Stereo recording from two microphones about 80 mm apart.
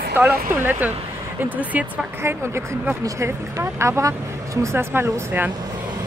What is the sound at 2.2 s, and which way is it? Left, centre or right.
Speech, right.